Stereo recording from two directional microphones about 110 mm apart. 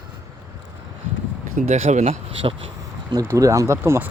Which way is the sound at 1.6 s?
90° right.